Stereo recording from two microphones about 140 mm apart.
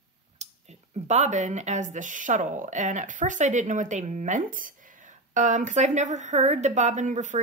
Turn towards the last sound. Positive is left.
turn(degrees=-60)  # may be behind; listen again after turning